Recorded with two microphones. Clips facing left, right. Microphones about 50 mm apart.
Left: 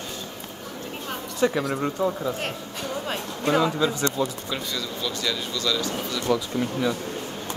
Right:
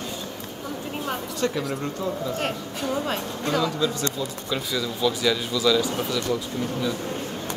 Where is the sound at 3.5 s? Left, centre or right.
Left.